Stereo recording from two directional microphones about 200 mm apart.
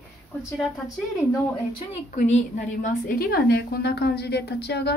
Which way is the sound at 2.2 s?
40° left (ahead or behind).